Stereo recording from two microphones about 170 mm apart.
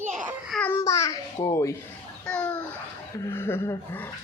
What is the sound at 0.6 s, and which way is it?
Babbling, 15° left (ahead or behind).